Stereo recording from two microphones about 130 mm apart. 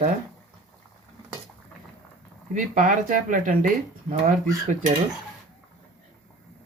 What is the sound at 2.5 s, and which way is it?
Speech, 85° right.